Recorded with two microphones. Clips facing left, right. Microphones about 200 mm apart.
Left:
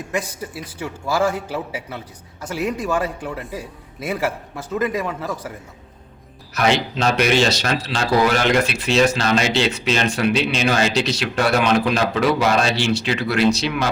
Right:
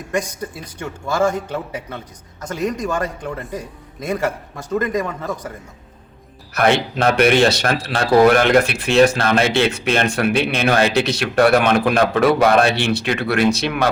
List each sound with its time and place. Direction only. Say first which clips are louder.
0.1 s a man's voice: right 4 dB; 5° left (ahead or behind)
6.5 s speech: right 3 dB; 55° right (ahead or behind)